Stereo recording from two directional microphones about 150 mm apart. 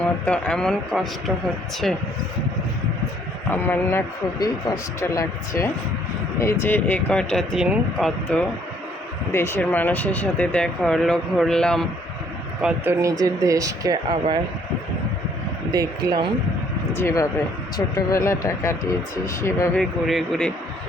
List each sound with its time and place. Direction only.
0.0 s speech: 5° left (ahead or behind)
3.5 s speech: 10° left (ahead or behind)
4.4 s speech: 25° left (ahead or behind); by 8.4 s 5° left (ahead or behind)
9.3 s speech: 15° left (ahead or behind)
12.6 s speech: 15° right (ahead or behind)
15.7 s speech: 25° right (ahead or behind)
16.9 s speech: 15° left (ahead or behind)
19.7 s speech: centre (ahead or behind)